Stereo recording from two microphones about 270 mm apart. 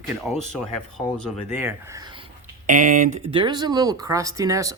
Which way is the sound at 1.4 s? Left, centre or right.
Centre.